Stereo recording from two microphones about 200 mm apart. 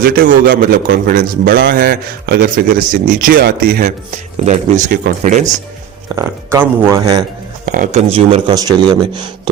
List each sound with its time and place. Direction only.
0.0 s a man's voice: 50° right (ahead or behind)
6.1 s speech: 15° right (ahead or behind)
7.6 s speech: 40° right (ahead or behind); by 9.3 s 20° right (ahead or behind)